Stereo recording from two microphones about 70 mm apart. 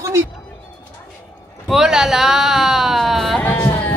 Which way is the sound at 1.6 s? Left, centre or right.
Centre.